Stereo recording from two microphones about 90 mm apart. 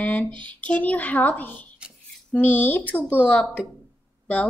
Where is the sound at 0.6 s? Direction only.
15° left (ahead or behind).